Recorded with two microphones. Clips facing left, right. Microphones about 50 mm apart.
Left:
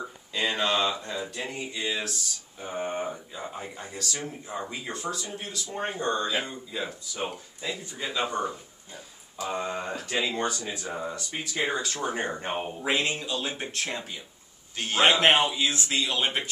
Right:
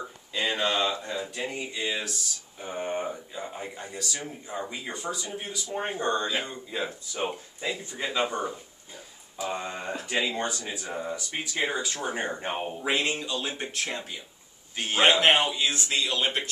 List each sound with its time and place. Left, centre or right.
0.0 s a sound: centre
1.0 s speech: centre
5.9 s speech: right
9.4 s speech: centre